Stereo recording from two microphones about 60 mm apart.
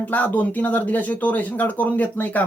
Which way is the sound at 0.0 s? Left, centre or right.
Left.